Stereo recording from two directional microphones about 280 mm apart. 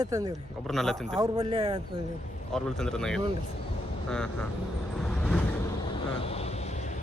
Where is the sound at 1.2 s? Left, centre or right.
Centre.